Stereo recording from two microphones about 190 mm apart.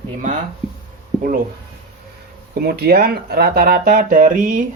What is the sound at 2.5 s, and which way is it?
Speech, 55° right (ahead or behind).